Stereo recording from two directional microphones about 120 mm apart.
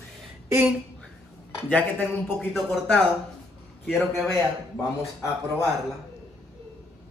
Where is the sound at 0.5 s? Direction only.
15° right (ahead or behind).